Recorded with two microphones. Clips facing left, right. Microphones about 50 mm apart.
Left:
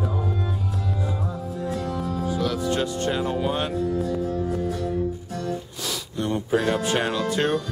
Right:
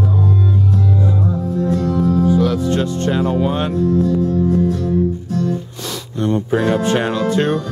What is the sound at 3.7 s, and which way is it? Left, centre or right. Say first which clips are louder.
Music: right 9 dB; centre.